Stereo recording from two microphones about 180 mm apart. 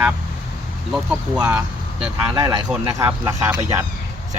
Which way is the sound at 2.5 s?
25° right (ahead or behind).